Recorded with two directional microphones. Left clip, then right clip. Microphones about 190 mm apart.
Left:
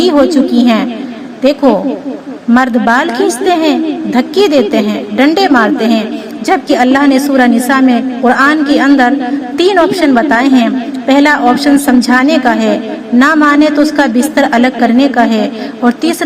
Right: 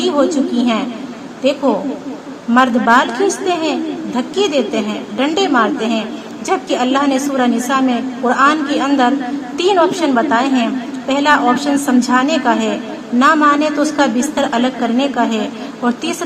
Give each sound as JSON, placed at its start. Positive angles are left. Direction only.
{"t": 0.0, "sound": "a woman's voice", "side_deg": 25}
{"t": 2.5, "sound": "a woman's voice", "side_deg": 30}